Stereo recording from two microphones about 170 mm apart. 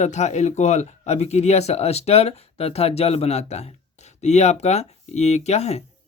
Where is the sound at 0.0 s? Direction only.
40° left (ahead or behind).